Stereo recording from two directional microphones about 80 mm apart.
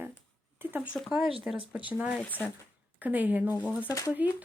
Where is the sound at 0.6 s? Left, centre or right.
Right.